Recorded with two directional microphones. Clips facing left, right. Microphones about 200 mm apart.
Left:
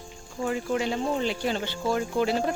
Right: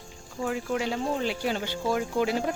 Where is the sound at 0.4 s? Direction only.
Centre (ahead or behind).